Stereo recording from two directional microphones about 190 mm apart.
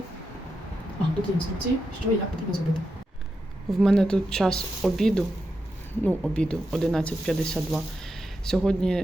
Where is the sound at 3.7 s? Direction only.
Centre (ahead or behind).